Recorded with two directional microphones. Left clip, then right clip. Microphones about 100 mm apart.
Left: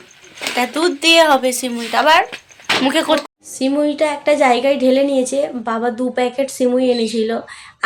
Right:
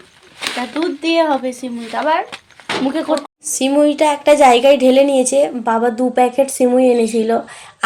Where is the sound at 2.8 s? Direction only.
10° right (ahead or behind).